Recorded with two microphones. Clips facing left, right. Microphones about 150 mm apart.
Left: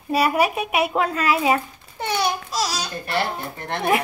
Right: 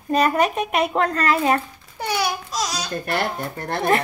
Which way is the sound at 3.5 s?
40° right (ahead or behind).